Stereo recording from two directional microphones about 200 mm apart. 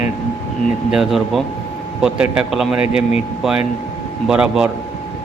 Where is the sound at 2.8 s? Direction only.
30° left (ahead or behind).